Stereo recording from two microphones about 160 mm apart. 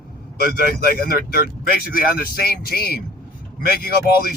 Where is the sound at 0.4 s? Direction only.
70° left (ahead or behind).